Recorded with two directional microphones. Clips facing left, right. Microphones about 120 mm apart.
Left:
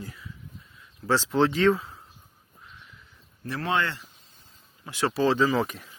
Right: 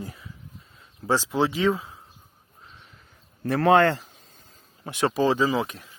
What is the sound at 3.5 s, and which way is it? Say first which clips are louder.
Speech: right 9 dB; 60° right (ahead or behind).